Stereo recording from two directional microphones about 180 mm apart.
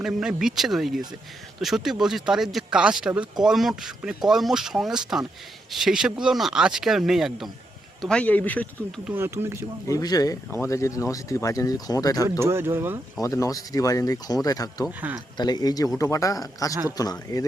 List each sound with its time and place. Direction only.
0.0 s speech: 5° right (ahead or behind)
9.0 s speech: 15° right (ahead or behind)
9.9 s speech: 20° left (ahead or behind)
12.4 s speech: 15° right (ahead or behind)
13.2 s speech: 15° left (ahead or behind)
14.8 s speech: 5° right (ahead or behind)
15.4 s speech: 25° left (ahead or behind)